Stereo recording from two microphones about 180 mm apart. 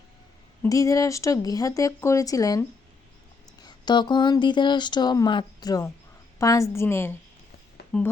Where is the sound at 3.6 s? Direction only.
25° left (ahead or behind).